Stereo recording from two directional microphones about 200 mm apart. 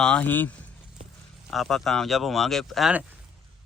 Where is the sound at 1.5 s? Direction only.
Centre (ahead or behind).